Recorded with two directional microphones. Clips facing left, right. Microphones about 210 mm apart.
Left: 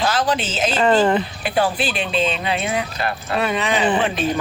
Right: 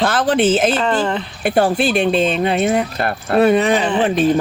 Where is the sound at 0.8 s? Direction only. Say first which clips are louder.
Left 3 dB; 5° left (ahead or behind).